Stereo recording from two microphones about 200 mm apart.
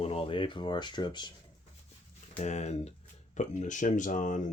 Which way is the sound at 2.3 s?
35° left (ahead or behind).